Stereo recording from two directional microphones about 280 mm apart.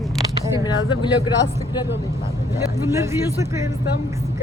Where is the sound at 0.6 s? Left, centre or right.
Centre.